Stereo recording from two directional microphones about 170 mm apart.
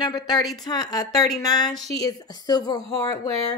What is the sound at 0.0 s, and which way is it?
A woman's voice, 25° left (ahead or behind).